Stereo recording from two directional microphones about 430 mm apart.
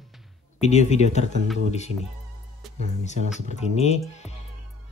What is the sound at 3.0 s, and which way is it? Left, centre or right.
Speech, centre.